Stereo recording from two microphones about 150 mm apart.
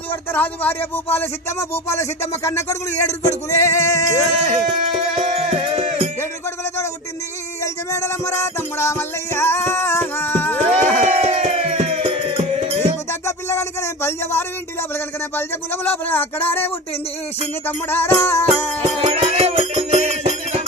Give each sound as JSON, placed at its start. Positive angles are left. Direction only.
{"t": 0.1, "sound": "music", "side_deg": 10}
{"t": 1.1, "sound": "speech", "side_deg": 15}
{"t": 4.9, "sound": "music", "side_deg": -40}
{"t": 7.6, "sound": "music", "side_deg": 20}
{"t": 11.0, "sound": "music", "side_deg": -45}
{"t": 13.1, "sound": "music", "side_deg": 20}
{"t": 17.7, "sound": "music", "side_deg": 15}
{"t": 18.8, "sound": "music", "side_deg": -45}